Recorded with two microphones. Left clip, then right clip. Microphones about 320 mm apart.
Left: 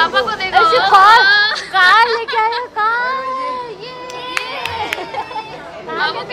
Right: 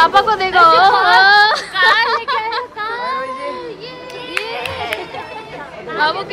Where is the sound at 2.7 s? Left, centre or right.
Left.